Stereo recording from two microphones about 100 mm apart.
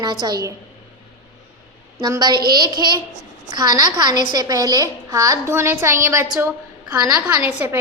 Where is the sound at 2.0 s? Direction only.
45° right (ahead or behind).